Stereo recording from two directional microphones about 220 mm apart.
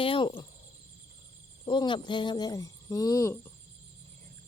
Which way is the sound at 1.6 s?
20° left (ahead or behind).